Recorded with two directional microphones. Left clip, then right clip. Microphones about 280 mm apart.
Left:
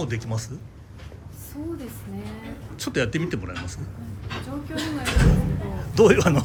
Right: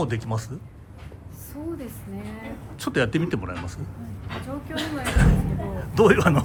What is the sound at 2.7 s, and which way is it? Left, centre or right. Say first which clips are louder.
Speech: right 2 dB; centre.